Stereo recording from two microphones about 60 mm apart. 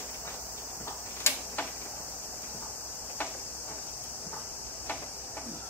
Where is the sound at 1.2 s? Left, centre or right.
Left.